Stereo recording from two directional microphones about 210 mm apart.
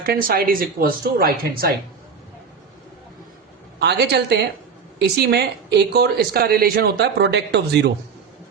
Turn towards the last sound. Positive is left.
turn(degrees=-55)  # may be behind; listen again after turning